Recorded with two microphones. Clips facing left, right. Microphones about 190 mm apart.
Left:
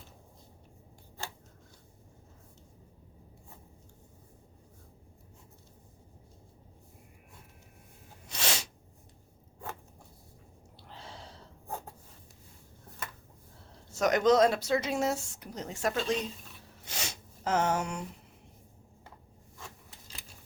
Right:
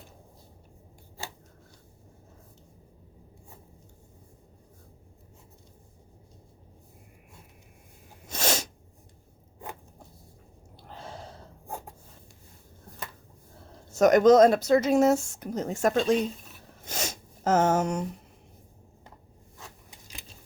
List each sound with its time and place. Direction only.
8.3 s sneeze: 45° right (ahead or behind)
10.8 s gasp: 50° right (ahead or behind)
13.9 s speech: 45° right (ahead or behind)
16.8 s a sound: 45° right (ahead or behind)
19.9 s keys jangling: 15° right (ahead or behind)